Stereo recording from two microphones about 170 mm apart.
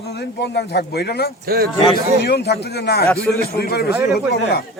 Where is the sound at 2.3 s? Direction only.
70° left (ahead or behind).